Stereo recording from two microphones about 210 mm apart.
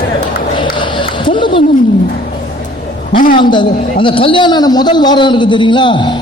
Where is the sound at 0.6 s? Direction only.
25° left (ahead or behind).